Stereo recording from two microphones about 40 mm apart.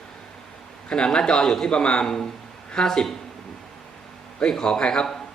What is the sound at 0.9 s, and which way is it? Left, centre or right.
Speech, left.